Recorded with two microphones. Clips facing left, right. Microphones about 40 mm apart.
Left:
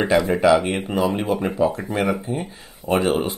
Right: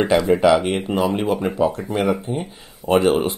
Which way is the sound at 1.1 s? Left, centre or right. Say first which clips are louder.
Right 2 dB; right.